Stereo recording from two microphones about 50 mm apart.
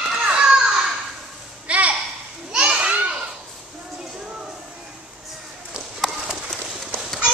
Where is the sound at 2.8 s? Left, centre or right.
Right.